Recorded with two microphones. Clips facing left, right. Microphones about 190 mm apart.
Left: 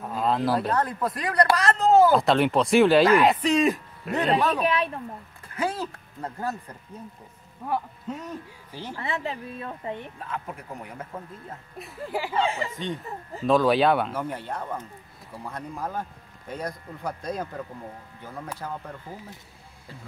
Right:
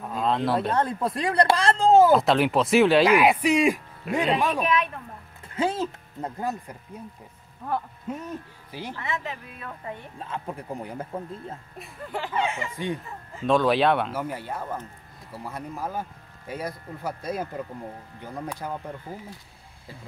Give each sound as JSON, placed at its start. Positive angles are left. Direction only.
{"t": 0.0, "sound": "a sound", "side_deg": 0}
{"t": 0.7, "sound": "speech", "side_deg": -25}
{"t": 2.1, "sound": "a man's voice", "side_deg": 0}
{"t": 4.6, "sound": "speech", "side_deg": 30}
{"t": 5.5, "sound": "speech", "side_deg": -25}
{"t": 8.1, "sound": "a man's voice", "side_deg": -10}
{"t": 8.9, "sound": "speech", "side_deg": 30}
{"t": 10.1, "sound": "speech", "side_deg": -30}
{"t": 11.8, "sound": "speech", "side_deg": 5}
{"t": 12.4, "sound": "speech", "side_deg": 35}
{"t": 12.7, "sound": "a man's voice", "side_deg": -10}
{"t": 13.5, "sound": "a man's voice", "side_deg": 0}